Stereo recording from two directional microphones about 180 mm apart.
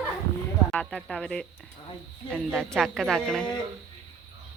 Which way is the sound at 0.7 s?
5° left (ahead or behind).